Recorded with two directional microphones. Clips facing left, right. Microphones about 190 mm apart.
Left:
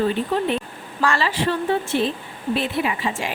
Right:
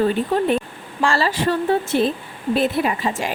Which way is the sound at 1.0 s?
35° right (ahead or behind).